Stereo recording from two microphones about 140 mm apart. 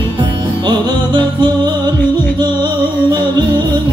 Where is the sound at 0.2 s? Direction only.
35° right (ahead or behind).